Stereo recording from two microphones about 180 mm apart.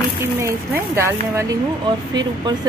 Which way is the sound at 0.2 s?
15° right (ahead or behind).